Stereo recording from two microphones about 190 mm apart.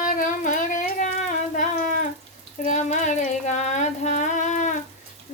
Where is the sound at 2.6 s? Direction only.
40° left (ahead or behind).